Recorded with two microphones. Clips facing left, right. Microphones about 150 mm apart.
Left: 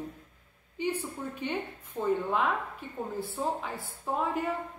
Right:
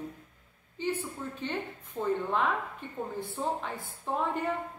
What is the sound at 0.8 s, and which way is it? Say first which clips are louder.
A woman's voice: left 1 dB; 15° left (ahead or behind).